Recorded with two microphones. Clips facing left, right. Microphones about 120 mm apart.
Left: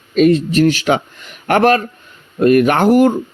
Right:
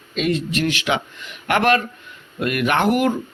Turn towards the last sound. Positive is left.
turn(degrees=35)  # may be behind; listen again after turning